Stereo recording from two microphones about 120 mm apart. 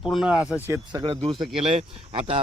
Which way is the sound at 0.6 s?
20° right (ahead or behind).